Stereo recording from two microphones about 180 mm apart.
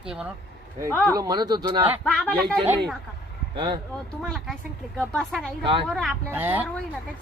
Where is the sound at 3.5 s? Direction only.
25° right (ahead or behind).